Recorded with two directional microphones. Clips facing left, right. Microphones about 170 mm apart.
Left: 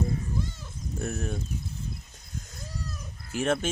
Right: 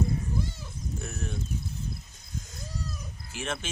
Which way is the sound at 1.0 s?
45° left (ahead or behind).